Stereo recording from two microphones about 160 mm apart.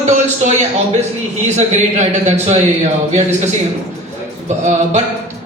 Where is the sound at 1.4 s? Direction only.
45° right (ahead or behind).